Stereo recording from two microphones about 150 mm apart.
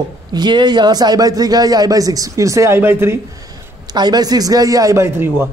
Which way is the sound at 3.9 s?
25° right (ahead or behind).